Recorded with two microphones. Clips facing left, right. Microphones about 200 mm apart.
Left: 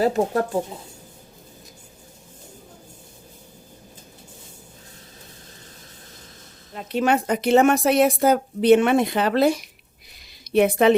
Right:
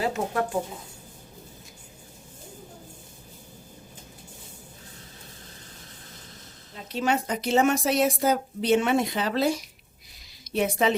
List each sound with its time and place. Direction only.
0.0 s speech: 35° left (ahead or behind)
6.7 s a woman's voice: 60° left (ahead or behind)